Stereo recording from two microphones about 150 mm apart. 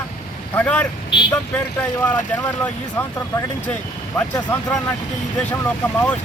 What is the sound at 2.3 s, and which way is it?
Speech, 10° left (ahead or behind).